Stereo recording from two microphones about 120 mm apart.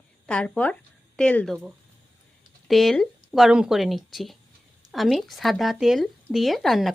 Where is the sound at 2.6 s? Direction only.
Centre (ahead or behind).